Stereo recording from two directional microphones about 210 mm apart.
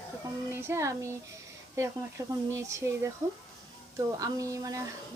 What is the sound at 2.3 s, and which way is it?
A woman's voice, 15° right (ahead or behind).